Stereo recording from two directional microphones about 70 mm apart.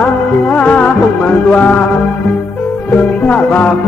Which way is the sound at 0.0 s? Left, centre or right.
Centre.